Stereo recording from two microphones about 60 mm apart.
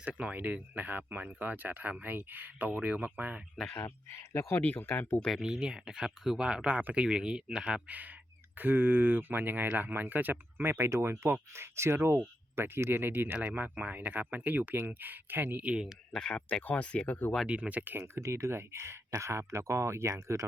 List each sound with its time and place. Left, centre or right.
0.0 s speech: right
3.8 s speech: left
4.5 s speech: left
5.4 s speech: centre
7.9 s speech: right
15.6 s speech: centre
16.1 s speech: centre
17.4 s speech: centre
17.9 s speech: right